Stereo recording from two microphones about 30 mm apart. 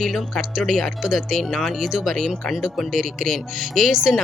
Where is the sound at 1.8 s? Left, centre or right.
Centre.